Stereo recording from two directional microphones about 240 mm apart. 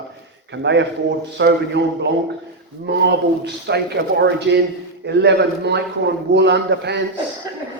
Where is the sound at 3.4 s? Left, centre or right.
Right.